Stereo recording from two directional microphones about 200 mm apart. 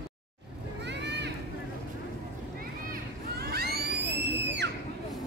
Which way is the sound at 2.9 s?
50° right (ahead or behind).